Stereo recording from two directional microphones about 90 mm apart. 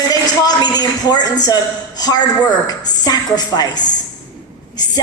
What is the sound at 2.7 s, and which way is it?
A woman's voice, 50° left (ahead or behind).